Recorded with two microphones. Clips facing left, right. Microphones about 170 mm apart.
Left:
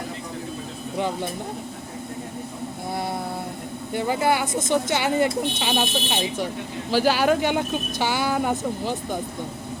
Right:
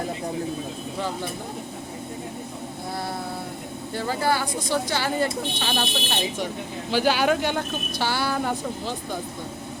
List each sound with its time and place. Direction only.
0.9 s speech: 20° left (ahead or behind)
3.9 s speech: 20° left (ahead or behind); by 7.4 s centre (ahead or behind)
7.4 s speech: 15° left (ahead or behind)